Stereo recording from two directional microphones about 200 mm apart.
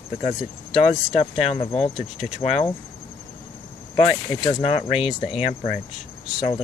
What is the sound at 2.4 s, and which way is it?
Speech, 30° left (ahead or behind).